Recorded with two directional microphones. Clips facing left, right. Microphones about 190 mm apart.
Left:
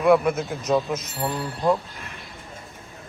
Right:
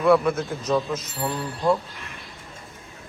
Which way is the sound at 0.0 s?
15° left (ahead or behind).